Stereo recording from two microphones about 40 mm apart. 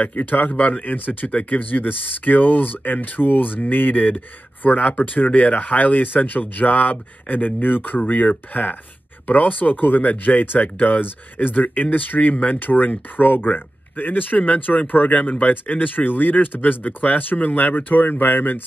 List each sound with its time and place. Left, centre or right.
0.0 s speech: left
0.5 s speech: left
0.8 s speech: left
1.3 s speech: left
4.6 s speech: left
12.5 s speech: left